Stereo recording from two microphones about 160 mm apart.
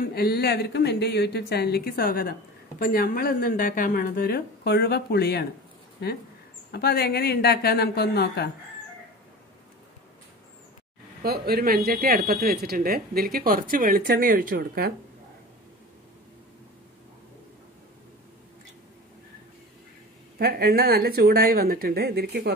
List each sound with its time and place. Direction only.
0.1 s speech: 75° left (ahead or behind)
6.7 s speech: 80° left
11.2 s speech: 75° right (ahead or behind); by 14.9 s 60° right (ahead or behind)
20.3 s speech: 75° right (ahead or behind); by 22.5 s 90° right